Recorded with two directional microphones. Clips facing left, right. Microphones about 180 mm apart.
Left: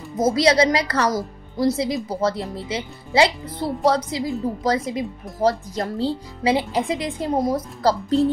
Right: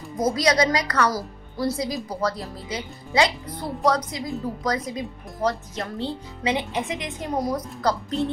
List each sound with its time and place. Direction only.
0.4 s speech: 25° left (ahead or behind)
1.9 s a woman's voice: centre (ahead or behind)
2.1 s speech: 25° left (ahead or behind)